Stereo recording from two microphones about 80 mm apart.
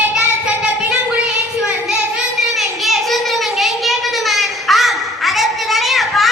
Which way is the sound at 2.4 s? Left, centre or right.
Centre.